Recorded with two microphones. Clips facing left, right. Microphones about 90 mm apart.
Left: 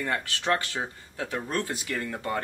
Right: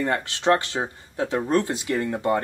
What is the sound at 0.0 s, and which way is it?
Speech, 25° right (ahead or behind).